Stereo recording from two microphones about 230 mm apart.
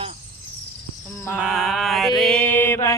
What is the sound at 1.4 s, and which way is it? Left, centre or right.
Mantra, centre.